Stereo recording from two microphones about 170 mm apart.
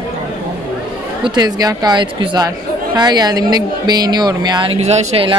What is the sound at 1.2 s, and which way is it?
Speech, 25° right (ahead or behind).